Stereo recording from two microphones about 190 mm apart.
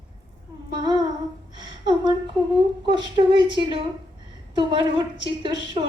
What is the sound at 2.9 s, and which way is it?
A woman's voice, 25° right (ahead or behind).